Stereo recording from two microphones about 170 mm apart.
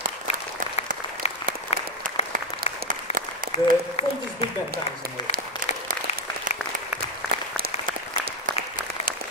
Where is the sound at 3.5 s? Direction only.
40° left (ahead or behind).